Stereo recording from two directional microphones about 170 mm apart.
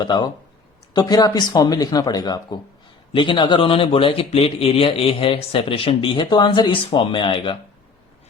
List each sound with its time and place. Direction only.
0.0 s a man's voice: 25° left (ahead or behind)